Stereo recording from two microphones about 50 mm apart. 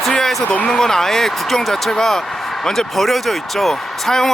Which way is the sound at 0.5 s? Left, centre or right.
Left.